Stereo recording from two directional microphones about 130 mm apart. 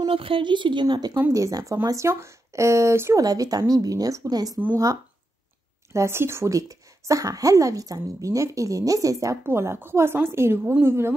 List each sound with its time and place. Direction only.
0.0 s speech: 45° right (ahead or behind)
1.1 s speech: 20° right (ahead or behind)
5.9 s speech: 20° right (ahead or behind)